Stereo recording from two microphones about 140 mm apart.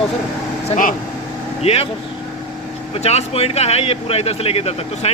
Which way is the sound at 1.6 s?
45° left (ahead or behind).